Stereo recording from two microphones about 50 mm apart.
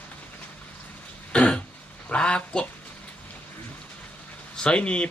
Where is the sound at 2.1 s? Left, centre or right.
Left.